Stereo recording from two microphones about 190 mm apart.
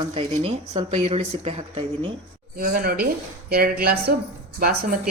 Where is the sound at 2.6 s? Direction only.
50° right (ahead or behind).